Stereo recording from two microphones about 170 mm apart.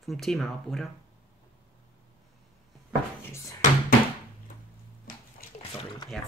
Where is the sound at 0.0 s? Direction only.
Centre (ahead or behind).